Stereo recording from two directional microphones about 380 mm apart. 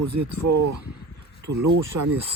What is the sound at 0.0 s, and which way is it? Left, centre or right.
Speech, right.